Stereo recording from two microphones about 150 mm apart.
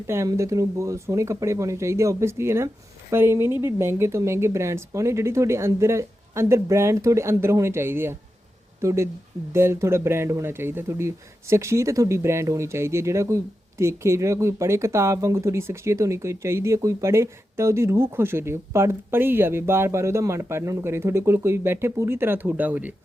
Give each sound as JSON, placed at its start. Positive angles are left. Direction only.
{"t": 0.1, "sound": "speech", "side_deg": -20}